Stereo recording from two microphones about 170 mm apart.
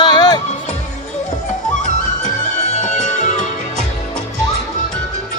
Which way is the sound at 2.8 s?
45° left (ahead or behind).